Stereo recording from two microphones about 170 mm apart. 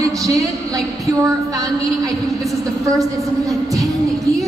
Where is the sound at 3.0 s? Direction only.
20° right (ahead or behind).